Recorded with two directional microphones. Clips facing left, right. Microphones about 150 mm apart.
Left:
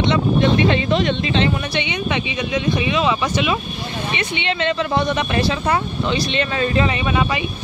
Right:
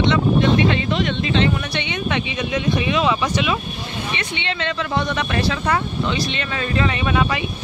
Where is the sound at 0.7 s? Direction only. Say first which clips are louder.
Left 3 dB; 25° left (ahead or behind).